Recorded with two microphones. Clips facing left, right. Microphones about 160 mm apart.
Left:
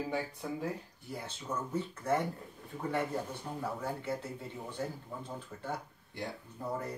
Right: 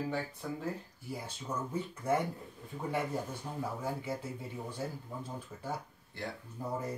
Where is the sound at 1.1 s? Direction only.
10° right (ahead or behind).